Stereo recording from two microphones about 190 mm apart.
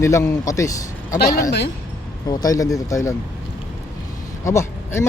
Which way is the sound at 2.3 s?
20° left (ahead or behind).